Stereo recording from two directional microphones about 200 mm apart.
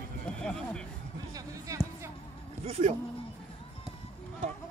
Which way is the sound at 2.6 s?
30° right (ahead or behind).